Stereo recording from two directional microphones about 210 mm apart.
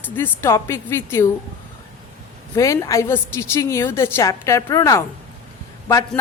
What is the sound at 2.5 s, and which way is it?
A woman's voice, 15° left (ahead or behind).